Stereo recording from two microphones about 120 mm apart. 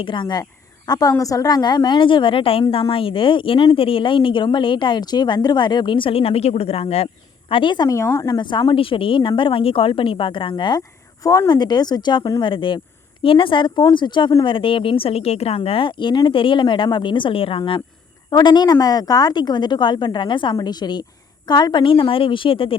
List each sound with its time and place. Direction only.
0.0 s a woman's voice: 40° left (ahead or behind)
7.5 s a woman's voice: 40° left (ahead or behind)
7.9 s speech: 25° left (ahead or behind)
8.4 s a woman's voice: 40° left (ahead or behind)
17.6 s a woman's voice: 35° left (ahead or behind)